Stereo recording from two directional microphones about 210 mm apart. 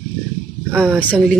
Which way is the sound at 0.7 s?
5° right (ahead or behind).